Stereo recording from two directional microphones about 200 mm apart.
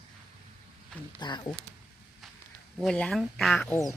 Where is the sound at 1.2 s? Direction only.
20° left (ahead or behind).